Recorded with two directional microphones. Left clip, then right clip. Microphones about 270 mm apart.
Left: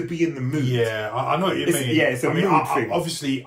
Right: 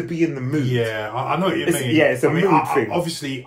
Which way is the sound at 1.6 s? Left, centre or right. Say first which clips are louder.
Right 3 dB; centre.